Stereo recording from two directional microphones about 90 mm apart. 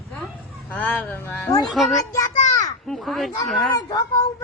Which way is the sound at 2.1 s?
40° left (ahead or behind).